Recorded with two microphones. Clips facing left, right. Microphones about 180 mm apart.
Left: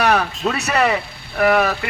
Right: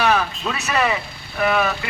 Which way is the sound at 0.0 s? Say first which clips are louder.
Left 2 dB; 65° left (ahead or behind).